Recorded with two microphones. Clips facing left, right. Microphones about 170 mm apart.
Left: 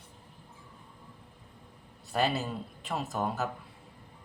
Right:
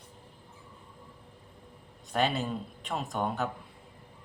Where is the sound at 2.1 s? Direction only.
5° left (ahead or behind).